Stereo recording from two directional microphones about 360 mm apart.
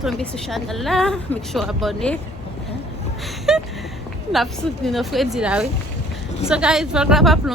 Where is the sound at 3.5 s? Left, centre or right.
Centre.